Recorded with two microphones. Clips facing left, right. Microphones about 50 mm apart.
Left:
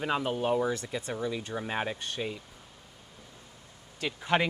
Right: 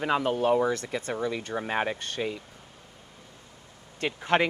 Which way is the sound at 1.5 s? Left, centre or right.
Right.